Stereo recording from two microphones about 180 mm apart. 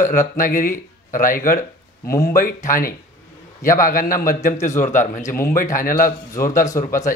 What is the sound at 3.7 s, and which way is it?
A man's voice, 50° left (ahead or behind).